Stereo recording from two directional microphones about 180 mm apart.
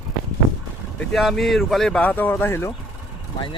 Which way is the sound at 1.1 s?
Centre (ahead or behind).